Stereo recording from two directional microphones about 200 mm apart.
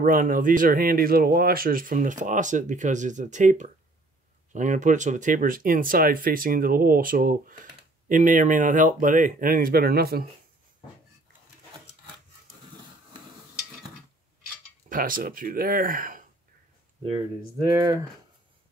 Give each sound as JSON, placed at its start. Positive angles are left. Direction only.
{"t": 0.0, "sound": "speech", "side_deg": -45}
{"t": 14.9, "sound": "speech", "side_deg": -45}
{"t": 17.6, "sound": "speech", "side_deg": -15}